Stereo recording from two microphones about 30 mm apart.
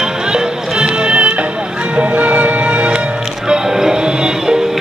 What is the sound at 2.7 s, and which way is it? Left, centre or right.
Music, right.